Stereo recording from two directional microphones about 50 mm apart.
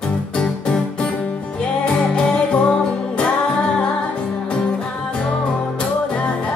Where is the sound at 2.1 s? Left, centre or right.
Left.